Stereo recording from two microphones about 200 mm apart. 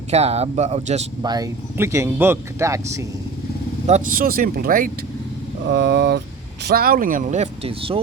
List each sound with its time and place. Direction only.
0.1 s speech: 30° right (ahead or behind)
1.2 s speech: 20° right (ahead or behind)
3.8 s speech: 40° right (ahead or behind)
5.7 s speech: 55° right (ahead or behind); by 7.9 s 30° right (ahead or behind)